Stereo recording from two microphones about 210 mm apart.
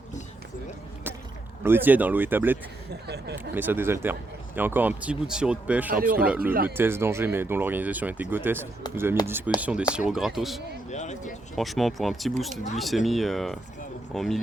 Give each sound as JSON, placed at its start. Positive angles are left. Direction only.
{"t": 1.6, "sound": "speech", "side_deg": -10}
{"t": 2.9, "sound": "speech", "side_deg": -50}
{"t": 3.3, "sound": "speech", "side_deg": -10}
{"t": 5.9, "sound": "speech", "side_deg": -45}
{"t": 6.1, "sound": "speech", "side_deg": -5}
{"t": 10.8, "sound": "speech", "side_deg": 35}
{"t": 11.5, "sound": "speech", "side_deg": 0}